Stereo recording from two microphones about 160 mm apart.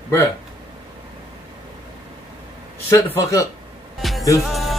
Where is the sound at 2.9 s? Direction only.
20° left (ahead or behind).